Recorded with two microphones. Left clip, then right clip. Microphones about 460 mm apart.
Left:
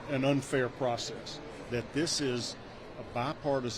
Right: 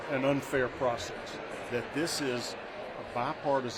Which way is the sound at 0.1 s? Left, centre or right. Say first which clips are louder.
Even; left.